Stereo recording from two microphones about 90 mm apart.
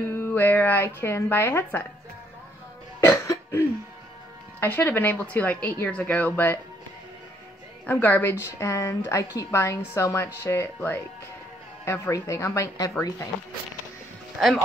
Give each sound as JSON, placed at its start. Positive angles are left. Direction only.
{"t": 0.1, "sound": "a woman's voice", "side_deg": 25}
{"t": 3.0, "sound": "cough", "side_deg": 30}
{"t": 4.6, "sound": "a woman's voice", "side_deg": 20}
{"t": 7.8, "sound": "a woman's voice", "side_deg": 15}
{"t": 8.5, "sound": "a woman's voice", "side_deg": 35}